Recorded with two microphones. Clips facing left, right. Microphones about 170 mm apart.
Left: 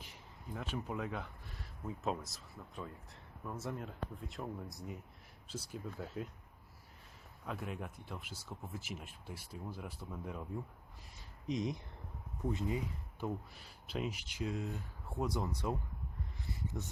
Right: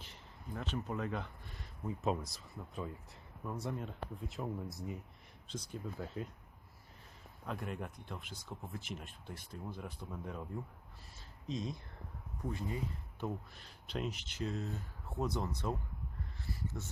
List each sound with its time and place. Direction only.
0.0 s speech: 10° left (ahead or behind)
7.4 s speech: 5° left (ahead or behind)
11.4 s speech: 20° left (ahead or behind)
16.5 s a sound: 15° left (ahead or behind)